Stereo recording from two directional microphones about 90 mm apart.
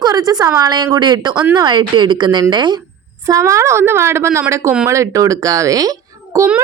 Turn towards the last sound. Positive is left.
turn(degrees=-40)  # may be behind; listen again after turning